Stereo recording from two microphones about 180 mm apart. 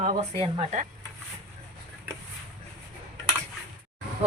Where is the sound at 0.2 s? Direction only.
35° right (ahead or behind).